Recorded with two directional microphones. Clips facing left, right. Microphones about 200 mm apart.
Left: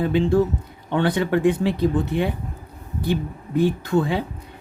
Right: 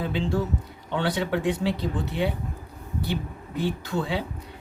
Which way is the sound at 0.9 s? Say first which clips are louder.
Left 5 dB; 55° left (ahead or behind).